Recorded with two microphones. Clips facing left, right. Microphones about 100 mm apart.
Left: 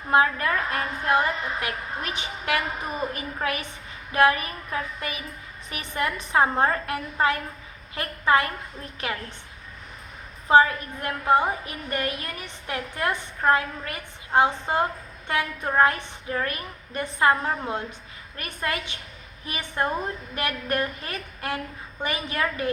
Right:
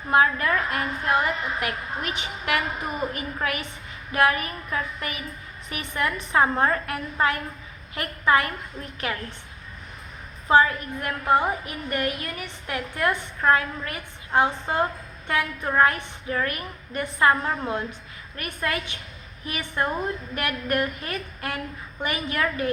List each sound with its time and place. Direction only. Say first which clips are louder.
0.1 s a woman's voice: right 1 dB; 30° left (ahead or behind)
10.7 s a woman's voice: right 1 dB; 25° left (ahead or behind)